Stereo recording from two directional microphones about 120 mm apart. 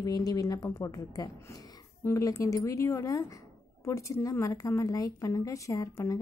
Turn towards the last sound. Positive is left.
turn(degrees=30)  # may be behind; listen again after turning